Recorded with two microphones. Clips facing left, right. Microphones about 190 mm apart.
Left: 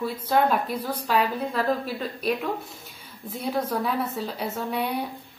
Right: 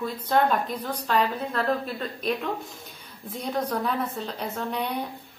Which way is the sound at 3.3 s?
5° left (ahead or behind).